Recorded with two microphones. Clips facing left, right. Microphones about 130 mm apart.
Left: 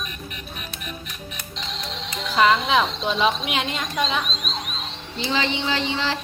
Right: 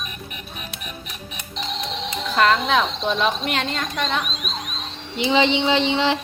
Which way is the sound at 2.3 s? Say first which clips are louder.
Even; 5° left (ahead or behind).